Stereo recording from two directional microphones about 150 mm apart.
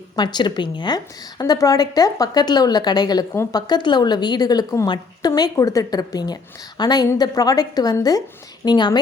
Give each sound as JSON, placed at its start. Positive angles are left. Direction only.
{"t": 0.2, "sound": "a woman's voice", "side_deg": 30}